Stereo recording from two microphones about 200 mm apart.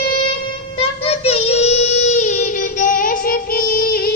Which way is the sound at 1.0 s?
30° left (ahead or behind).